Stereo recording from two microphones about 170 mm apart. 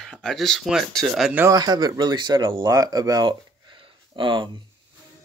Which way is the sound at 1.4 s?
20° right (ahead or behind).